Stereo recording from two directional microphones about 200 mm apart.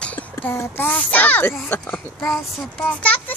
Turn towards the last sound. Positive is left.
turn(degrees=5)  # may be behind; listen again after turning